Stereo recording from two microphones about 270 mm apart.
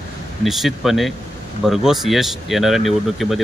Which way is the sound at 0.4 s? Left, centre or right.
Centre.